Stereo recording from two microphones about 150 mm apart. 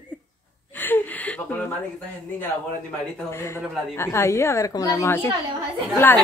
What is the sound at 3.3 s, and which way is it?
A woman's voice, 15° left (ahead or behind).